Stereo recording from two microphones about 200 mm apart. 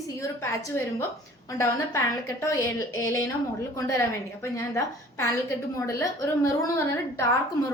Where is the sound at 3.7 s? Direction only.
15° left (ahead or behind).